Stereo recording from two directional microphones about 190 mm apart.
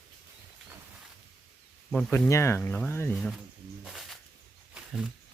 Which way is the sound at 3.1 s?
Centre (ahead or behind).